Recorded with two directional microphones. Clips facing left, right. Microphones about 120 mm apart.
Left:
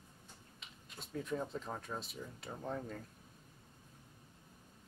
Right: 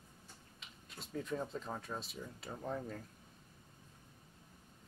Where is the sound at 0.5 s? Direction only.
Centre (ahead or behind).